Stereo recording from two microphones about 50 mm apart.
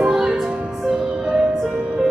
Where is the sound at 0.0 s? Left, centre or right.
Centre.